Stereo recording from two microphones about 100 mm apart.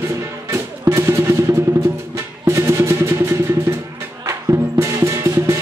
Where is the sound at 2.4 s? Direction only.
25° right (ahead or behind).